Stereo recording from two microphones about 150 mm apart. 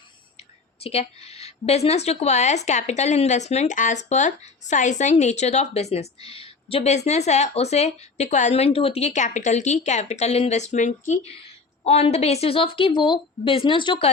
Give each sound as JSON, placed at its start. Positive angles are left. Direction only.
{"t": 0.3, "sound": "a woman's voice", "side_deg": 40}